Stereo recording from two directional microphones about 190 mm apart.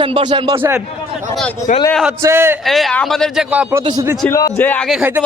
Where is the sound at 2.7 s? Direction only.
Centre (ahead or behind).